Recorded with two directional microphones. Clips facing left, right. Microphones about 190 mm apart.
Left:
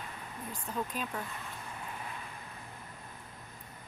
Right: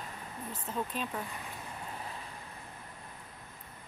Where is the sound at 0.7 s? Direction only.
5° right (ahead or behind).